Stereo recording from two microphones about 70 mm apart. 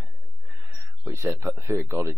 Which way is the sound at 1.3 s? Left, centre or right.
Right.